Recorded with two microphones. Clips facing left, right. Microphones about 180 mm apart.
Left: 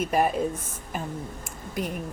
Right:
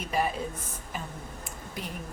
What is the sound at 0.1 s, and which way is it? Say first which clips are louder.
Speech: left 3 dB; 50° left (ahead or behind).